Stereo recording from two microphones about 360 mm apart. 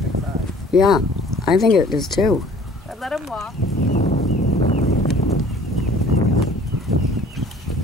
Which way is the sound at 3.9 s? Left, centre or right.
Left.